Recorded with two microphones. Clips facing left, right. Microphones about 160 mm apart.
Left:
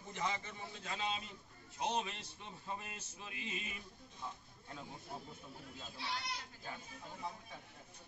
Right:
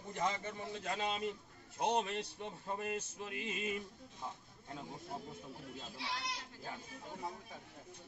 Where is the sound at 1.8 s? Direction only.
55° right (ahead or behind).